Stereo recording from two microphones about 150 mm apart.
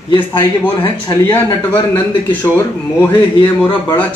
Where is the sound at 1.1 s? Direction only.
30° left (ahead or behind).